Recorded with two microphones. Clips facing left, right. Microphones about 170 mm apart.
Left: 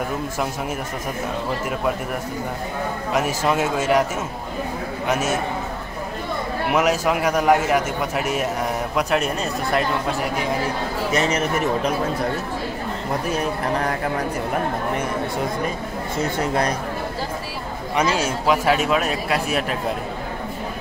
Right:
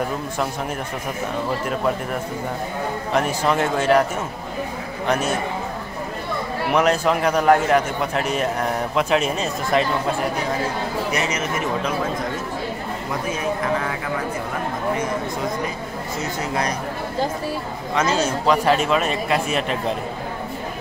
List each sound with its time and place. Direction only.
3.4 s a man's voice: 5° left (ahead or behind)
5.0 s a man's voice: 5° left (ahead or behind)
6.7 s a man's voice: 5° left (ahead or behind)
11.1 s speech: 30° left (ahead or behind)
17.9 s a man's voice: 10° left (ahead or behind)